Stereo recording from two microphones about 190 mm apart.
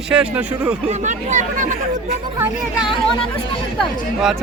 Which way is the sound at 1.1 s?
40° right (ahead or behind).